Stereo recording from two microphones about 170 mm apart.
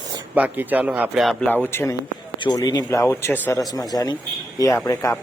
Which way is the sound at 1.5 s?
10° left (ahead or behind).